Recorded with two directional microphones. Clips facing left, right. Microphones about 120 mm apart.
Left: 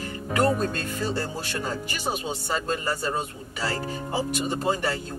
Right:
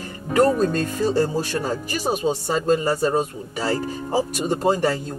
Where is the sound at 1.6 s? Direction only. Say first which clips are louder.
Right 5 dB; 40° right (ahead or behind).